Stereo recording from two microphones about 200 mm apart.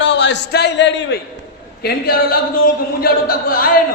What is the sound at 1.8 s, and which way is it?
Speech, 50° left (ahead or behind).